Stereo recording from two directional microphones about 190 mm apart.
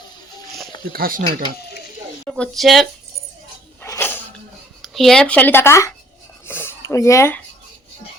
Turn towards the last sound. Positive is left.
turn(degrees=15)  # may be behind; listen again after turning